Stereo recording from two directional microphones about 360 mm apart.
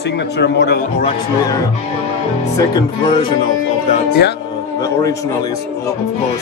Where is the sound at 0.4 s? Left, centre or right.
Left.